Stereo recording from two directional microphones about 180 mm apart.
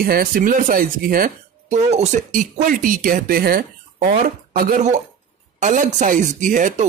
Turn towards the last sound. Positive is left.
turn(degrees=-45)  # may be behind; listen again after turning